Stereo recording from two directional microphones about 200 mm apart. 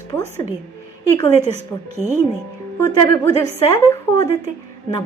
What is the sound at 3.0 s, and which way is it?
A woman's voice, 15° left (ahead or behind).